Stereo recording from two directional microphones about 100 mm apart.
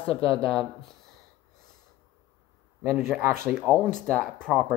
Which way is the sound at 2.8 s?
25° right (ahead or behind).